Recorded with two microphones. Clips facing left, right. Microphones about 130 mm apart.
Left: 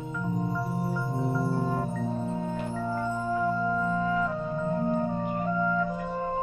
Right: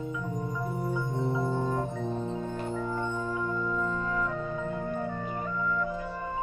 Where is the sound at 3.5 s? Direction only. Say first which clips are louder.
Left 3 dB; 35° left (ahead or behind).